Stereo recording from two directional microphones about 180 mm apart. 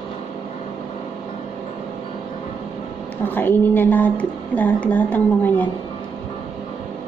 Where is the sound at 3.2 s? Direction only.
10° left (ahead or behind).